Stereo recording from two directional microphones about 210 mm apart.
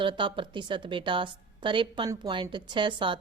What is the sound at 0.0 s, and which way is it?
A woman's voice, 25° right (ahead or behind).